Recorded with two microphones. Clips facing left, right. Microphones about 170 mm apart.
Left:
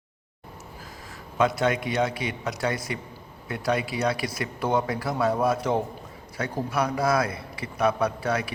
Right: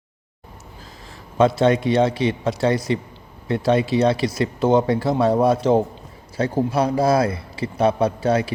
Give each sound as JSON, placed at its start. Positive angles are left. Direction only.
{"t": 1.4, "sound": "a man's voice", "side_deg": -30}